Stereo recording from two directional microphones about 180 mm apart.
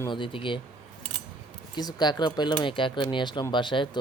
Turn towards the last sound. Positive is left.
turn(degrees=25)  # may be behind; listen again after turning